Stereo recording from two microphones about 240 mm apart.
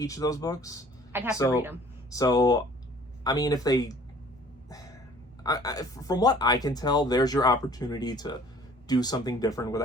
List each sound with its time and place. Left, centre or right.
0.0 s speech: centre
1.1 s speech: centre
2.0 s speech: centre
5.4 s speech: centre